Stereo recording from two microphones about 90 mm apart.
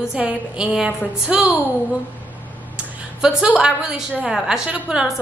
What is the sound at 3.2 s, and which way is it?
A woman's voice, 10° right (ahead or behind).